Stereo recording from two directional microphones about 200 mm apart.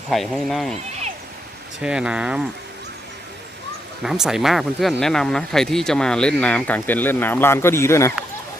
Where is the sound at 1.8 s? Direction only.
5° right (ahead or behind).